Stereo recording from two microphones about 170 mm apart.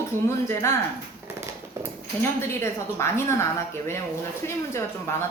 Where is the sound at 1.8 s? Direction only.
15° right (ahead or behind).